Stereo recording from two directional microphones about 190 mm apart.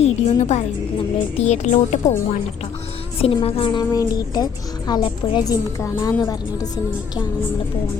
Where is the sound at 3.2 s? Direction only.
30° left (ahead or behind).